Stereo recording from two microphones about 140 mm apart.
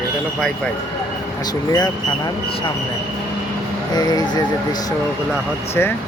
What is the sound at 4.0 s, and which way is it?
Speech, 30° left (ahead or behind).